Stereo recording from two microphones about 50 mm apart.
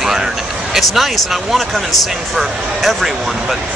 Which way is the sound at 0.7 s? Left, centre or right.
Centre.